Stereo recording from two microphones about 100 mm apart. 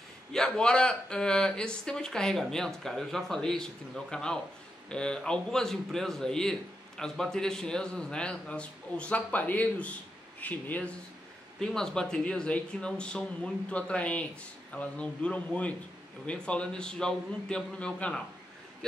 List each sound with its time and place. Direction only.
0.3 s a man's voice: 5° left (ahead or behind)